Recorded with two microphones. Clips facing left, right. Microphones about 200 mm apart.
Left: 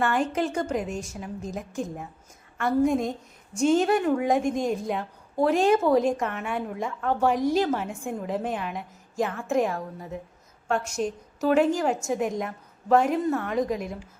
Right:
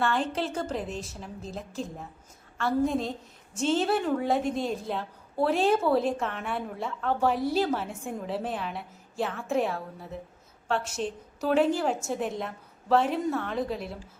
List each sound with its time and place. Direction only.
0.0 s a woman's voice: 10° left (ahead or behind)
7.4 s a woman's voice: 5° right (ahead or behind)
7.8 s a woman's voice: 10° left (ahead or behind)